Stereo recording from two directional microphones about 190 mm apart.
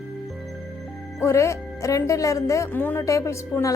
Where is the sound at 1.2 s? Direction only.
15° left (ahead or behind).